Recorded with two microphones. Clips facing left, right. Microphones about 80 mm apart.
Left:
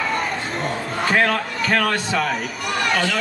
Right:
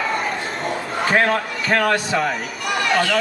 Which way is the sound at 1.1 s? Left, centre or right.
Right.